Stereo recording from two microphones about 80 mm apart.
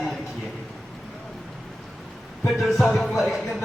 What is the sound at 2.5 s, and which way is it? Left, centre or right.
Speech, centre.